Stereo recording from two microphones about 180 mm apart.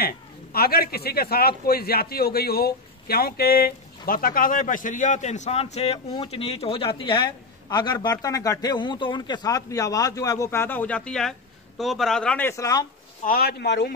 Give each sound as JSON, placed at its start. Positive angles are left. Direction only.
{"t": 0.0, "sound": "a man's voice", "side_deg": 60}
{"t": 13.2, "sound": "a man's voice", "side_deg": 55}